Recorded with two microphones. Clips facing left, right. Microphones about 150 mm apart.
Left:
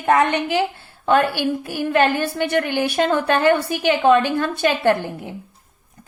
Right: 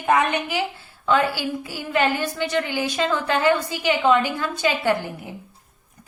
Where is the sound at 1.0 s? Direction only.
60° left (ahead or behind).